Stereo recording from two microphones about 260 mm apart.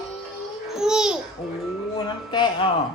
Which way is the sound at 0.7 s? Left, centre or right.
Centre.